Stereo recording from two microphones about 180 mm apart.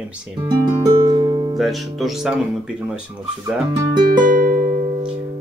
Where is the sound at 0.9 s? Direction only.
20° right (ahead or behind).